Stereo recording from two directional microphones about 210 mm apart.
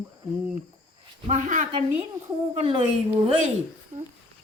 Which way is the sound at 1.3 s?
35° right (ahead or behind).